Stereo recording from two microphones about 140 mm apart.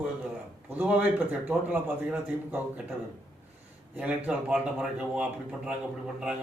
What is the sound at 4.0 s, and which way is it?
A man's voice, 10° right (ahead or behind).